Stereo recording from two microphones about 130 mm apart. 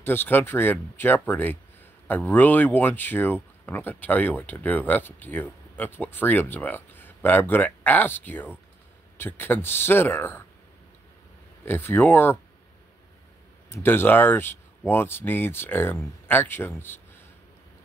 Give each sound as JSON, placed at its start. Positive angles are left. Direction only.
{"t": 0.0, "sound": "speech", "side_deg": 15}
{"t": 11.6, "sound": "speech", "side_deg": 15}
{"t": 13.7, "sound": "speech", "side_deg": 15}